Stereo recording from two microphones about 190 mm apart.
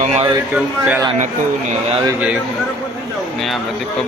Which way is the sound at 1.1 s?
40° right (ahead or behind).